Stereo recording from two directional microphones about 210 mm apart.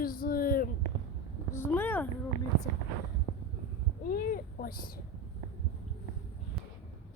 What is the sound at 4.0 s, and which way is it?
Speech, 45° left (ahead or behind).